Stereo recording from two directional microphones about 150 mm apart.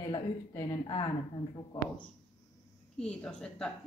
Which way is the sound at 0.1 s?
25° left (ahead or behind).